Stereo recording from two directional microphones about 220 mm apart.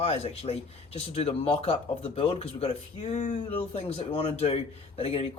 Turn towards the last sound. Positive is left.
turn(degrees=25)  # may be behind; listen again after turning